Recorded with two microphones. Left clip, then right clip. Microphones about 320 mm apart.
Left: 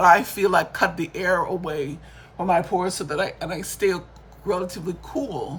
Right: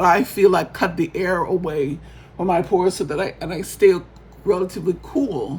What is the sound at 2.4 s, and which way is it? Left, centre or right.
Speech, centre.